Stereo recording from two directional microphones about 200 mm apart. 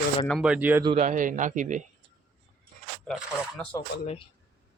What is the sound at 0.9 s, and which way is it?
Speech, 40° right (ahead or behind).